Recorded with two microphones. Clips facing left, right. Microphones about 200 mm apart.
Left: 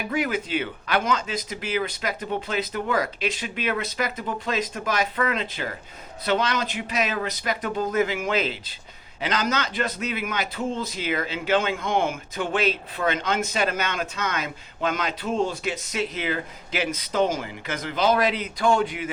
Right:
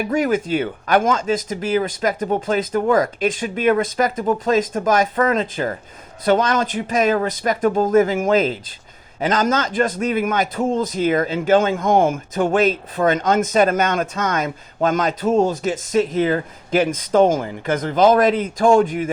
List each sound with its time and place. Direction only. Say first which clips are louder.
0.1 s a man's voice: right 6 dB; 45° right (ahead or behind)